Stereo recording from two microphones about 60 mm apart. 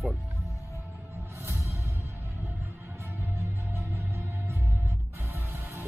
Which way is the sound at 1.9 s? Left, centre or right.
Right.